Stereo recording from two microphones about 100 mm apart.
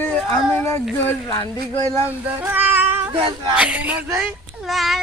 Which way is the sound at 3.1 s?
60° right (ahead or behind).